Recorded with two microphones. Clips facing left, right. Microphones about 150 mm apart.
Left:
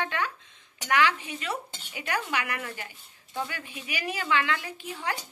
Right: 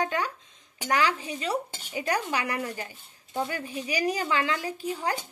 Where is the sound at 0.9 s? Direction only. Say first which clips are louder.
Left 1 dB; 35° right (ahead or behind).